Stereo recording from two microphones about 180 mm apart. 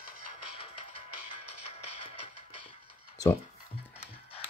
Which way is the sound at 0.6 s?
35° left (ahead or behind).